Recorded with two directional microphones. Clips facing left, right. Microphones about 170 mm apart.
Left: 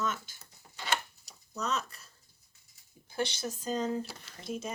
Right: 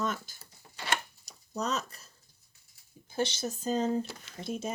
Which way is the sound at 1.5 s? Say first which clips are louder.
Right 2 dB; 35° right (ahead or behind).